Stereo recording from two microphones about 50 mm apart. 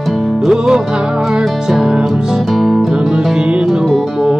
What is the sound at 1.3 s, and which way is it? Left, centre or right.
Music, centre.